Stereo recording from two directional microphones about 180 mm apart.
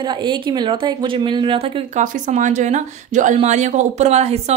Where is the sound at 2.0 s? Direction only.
45° right (ahead or behind).